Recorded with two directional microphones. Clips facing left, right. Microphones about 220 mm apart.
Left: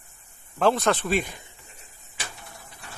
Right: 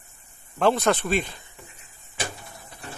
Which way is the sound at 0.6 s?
Centre (ahead or behind).